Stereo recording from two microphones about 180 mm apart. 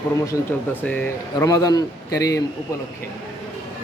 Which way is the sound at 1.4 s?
20° left (ahead or behind).